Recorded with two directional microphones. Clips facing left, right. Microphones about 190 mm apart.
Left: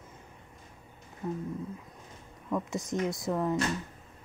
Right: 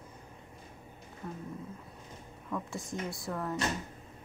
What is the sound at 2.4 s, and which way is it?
Speech, 20° left (ahead or behind).